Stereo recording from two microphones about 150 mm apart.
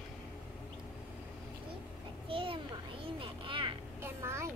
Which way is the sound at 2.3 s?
35° right (ahead or behind).